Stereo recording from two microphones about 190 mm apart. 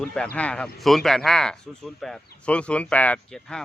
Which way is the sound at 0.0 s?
5° left (ahead or behind).